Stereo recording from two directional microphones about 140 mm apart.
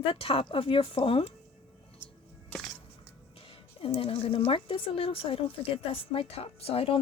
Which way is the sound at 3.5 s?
40° left (ahead or behind).